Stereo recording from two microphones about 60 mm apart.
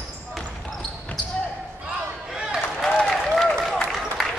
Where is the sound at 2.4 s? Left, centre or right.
Centre.